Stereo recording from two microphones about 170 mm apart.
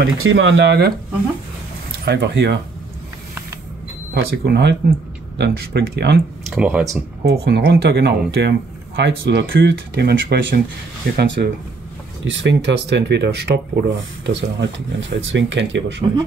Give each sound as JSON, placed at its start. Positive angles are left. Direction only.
{"t": 0.0, "sound": "speech", "side_deg": -90}
{"t": 2.0, "sound": "speech", "side_deg": -85}
{"t": 4.1, "sound": "speech", "side_deg": -70}
{"t": 6.4, "sound": "speech", "side_deg": -5}
{"t": 7.2, "sound": "speech", "side_deg": -70}
{"t": 12.3, "sound": "speech", "side_deg": -90}